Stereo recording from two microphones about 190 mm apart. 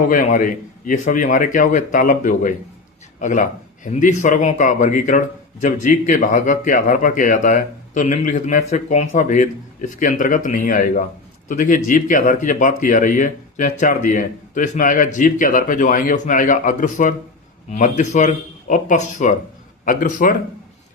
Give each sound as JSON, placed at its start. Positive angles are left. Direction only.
{"t": 0.0, "sound": "a man's voice", "side_deg": 45}